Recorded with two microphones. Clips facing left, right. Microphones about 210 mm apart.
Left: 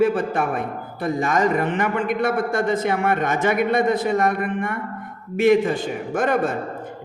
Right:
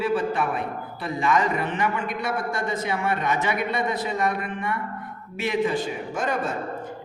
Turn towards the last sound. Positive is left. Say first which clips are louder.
# left 6 dB
turn(degrees=55)  # may be behind; listen again after turning